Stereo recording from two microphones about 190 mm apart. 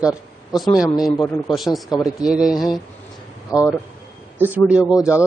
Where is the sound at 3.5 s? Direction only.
20° left (ahead or behind).